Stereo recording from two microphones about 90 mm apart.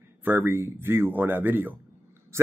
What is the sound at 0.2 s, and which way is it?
Speech, 25° right (ahead or behind).